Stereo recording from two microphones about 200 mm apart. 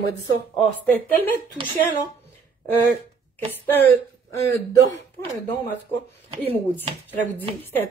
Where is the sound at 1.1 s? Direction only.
10° left (ahead or behind).